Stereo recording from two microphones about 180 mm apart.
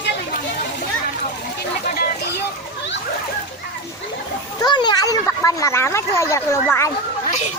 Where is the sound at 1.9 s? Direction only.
60° left (ahead or behind).